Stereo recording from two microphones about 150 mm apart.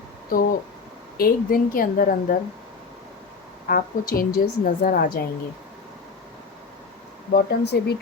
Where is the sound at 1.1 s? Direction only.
80° left.